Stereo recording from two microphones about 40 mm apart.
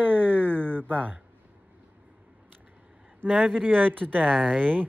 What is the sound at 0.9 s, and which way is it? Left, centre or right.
Speech, right.